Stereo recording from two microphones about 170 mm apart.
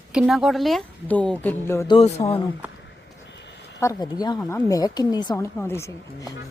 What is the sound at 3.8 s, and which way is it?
Speech, 20° left (ahead or behind).